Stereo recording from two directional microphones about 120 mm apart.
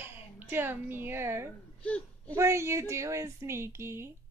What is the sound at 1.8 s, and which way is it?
Speech, 10° left (ahead or behind).